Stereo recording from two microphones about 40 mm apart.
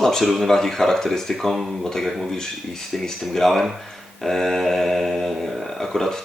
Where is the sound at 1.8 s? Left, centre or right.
Centre.